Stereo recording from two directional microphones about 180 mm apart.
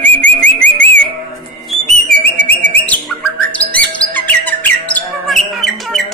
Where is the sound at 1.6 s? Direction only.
5° left (ahead or behind).